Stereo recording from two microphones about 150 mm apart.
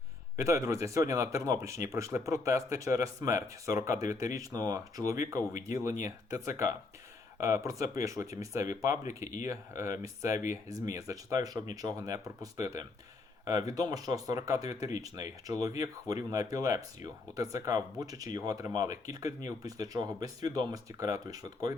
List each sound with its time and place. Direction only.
0.3 s speech: 20° right (ahead or behind)